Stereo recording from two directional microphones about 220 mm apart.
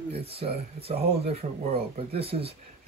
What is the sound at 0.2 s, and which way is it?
Speech, 25° right (ahead or behind).